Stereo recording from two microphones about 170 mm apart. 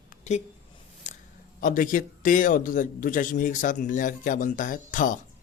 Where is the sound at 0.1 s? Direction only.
45° left (ahead or behind).